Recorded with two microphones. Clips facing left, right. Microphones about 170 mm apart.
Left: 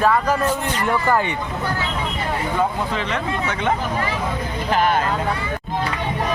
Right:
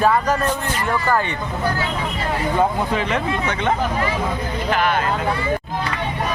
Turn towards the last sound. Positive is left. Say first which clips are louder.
# left 1 dB
turn(degrees=40)  # may be behind; listen again after turning